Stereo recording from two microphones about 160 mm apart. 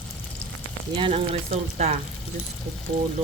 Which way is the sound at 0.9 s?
35° right (ahead or behind).